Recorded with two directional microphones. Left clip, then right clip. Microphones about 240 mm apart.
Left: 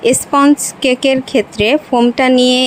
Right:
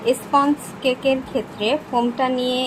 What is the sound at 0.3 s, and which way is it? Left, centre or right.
Speech, left.